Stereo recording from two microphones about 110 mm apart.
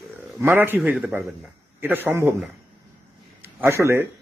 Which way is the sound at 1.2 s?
Centre (ahead or behind).